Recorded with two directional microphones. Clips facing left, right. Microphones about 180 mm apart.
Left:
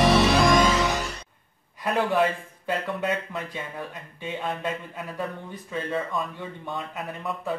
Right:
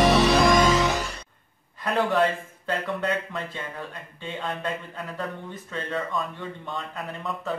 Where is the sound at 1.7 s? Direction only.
10° left (ahead or behind).